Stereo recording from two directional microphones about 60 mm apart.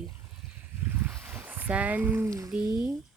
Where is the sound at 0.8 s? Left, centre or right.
Right.